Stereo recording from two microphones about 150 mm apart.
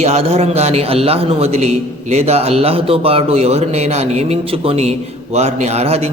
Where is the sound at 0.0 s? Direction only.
45° right (ahead or behind).